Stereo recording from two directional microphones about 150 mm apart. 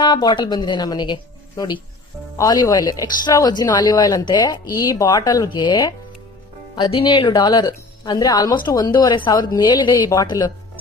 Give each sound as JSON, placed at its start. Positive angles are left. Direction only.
{"t": 0.0, "sound": "speech", "side_deg": 30}